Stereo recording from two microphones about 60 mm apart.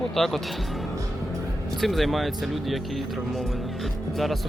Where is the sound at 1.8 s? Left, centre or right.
Centre.